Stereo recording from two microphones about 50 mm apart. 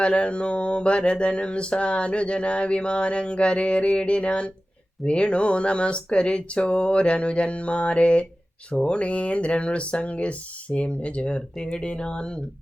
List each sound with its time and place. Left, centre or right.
0.0 s mantra: left